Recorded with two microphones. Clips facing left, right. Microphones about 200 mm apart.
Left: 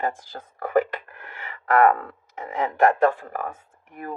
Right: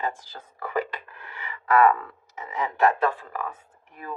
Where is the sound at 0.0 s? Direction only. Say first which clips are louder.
Left 3 dB; 50° left (ahead or behind).